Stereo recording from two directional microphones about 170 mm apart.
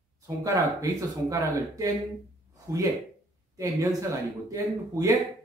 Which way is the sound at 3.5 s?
20° right (ahead or behind).